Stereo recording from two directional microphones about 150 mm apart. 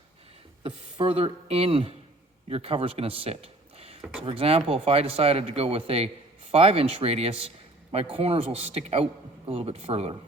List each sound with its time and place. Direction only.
0.6 s speech: 40° right (ahead or behind)